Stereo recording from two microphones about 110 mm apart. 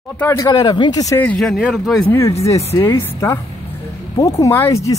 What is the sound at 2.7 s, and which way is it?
Speech, 45° left (ahead or behind).